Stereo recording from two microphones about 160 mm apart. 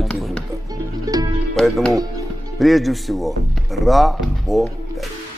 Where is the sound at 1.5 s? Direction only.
Centre (ahead or behind).